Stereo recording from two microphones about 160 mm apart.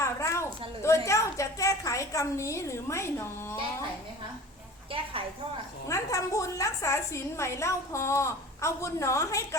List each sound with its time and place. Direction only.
0.0 s a sound: 20° left (ahead or behind)
0.8 s a woman's voice: 20° left (ahead or behind)
4.9 s a woman's voice: 35° right (ahead or behind)
5.9 s a woman's voice: 20° left (ahead or behind)